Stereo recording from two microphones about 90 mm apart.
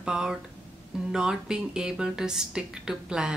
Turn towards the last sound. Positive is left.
turn(degrees=-10)  # may be behind; listen again after turning